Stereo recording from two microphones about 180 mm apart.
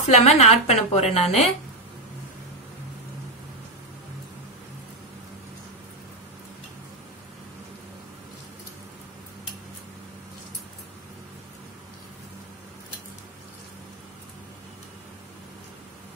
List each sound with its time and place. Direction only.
0.0 s a woman's voice: 35° left (ahead or behind)